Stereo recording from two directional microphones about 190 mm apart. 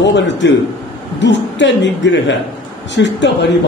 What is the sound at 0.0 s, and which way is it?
A man's voice, 70° left (ahead or behind).